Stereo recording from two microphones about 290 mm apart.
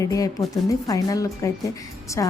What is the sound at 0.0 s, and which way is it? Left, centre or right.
Speech, centre.